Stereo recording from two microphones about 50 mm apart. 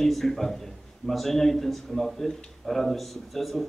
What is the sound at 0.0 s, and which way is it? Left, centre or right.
A man's voice, centre.